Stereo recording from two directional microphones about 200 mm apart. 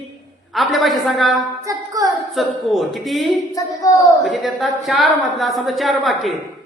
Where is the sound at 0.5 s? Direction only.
Centre (ahead or behind).